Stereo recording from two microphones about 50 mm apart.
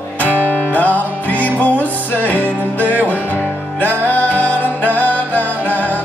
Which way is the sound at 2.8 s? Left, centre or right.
Right.